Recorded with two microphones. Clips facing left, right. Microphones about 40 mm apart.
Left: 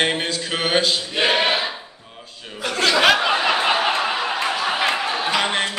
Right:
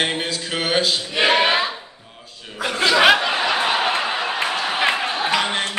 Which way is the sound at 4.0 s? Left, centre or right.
Centre.